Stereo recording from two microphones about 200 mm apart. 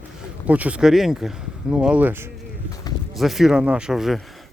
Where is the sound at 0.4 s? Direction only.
5° right (ahead or behind).